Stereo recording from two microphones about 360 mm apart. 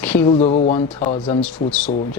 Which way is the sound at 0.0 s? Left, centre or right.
Centre.